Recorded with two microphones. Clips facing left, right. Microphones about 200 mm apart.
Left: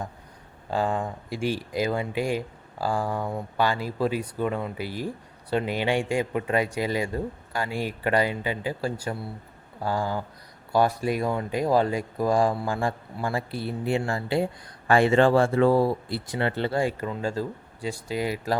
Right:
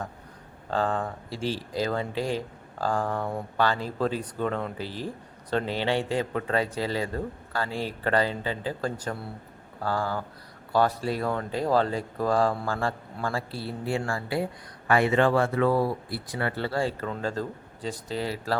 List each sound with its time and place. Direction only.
0.7 s speech: 10° left (ahead or behind)